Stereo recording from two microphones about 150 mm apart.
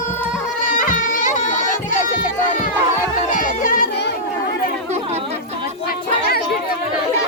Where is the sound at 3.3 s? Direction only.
65° left (ahead or behind).